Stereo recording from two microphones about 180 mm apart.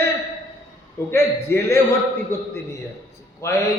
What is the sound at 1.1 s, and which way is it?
Speech, 15° left (ahead or behind).